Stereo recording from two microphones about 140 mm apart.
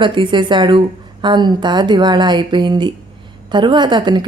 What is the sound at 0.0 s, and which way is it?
A woman's voice, 35° right (ahead or behind).